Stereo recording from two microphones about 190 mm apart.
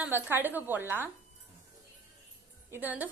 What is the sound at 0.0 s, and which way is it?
Speech, 10° right (ahead or behind).